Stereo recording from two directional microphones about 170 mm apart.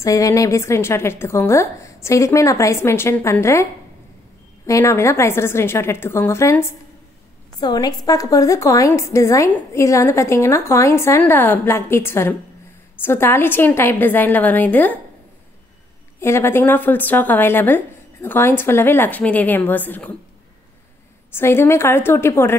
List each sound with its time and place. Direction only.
0.0 s a woman's voice: 20° left (ahead or behind)
4.6 s a woman's voice: 20° left (ahead or behind)
16.2 s a woman's voice: 15° left (ahead or behind)
21.3 s a woman's voice: 15° left (ahead or behind)